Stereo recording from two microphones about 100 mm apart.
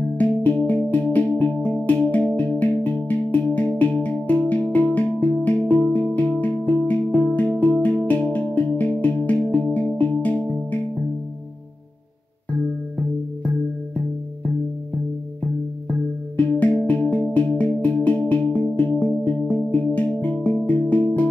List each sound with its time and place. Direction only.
0.2 s music: 15° left (ahead or behind)
16.3 s music: 15° left (ahead or behind)